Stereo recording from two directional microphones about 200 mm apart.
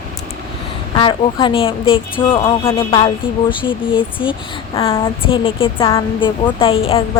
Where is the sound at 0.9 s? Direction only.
25° left (ahead or behind).